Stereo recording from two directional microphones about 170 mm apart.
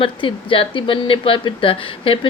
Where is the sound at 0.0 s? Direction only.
30° left (ahead or behind).